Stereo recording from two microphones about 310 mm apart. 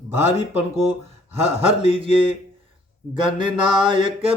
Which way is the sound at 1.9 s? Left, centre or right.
Centre.